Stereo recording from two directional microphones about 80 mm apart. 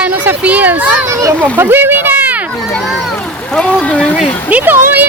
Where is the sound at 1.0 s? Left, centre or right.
Right.